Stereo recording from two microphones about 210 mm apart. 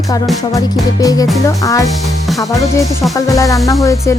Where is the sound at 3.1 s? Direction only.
15° left (ahead or behind).